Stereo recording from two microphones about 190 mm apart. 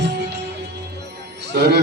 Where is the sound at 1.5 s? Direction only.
50° right (ahead or behind).